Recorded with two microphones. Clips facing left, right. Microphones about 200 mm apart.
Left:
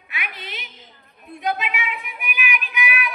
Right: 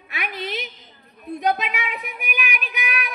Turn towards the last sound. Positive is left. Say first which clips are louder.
# left 2 dB
turn(degrees=-40)  # may be behind; listen again after turning